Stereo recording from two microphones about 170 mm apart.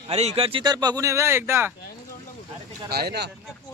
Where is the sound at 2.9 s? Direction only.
70° right (ahead or behind).